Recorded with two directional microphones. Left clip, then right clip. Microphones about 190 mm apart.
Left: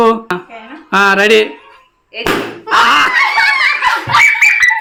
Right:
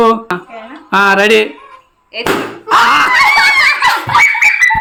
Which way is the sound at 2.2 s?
65° right (ahead or behind).